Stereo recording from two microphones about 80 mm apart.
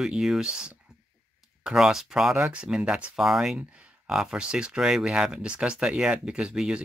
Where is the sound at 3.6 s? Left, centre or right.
Centre.